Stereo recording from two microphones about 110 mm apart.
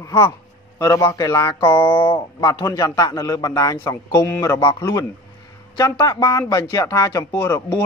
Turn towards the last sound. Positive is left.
turn(degrees=25)  # may be behind; listen again after turning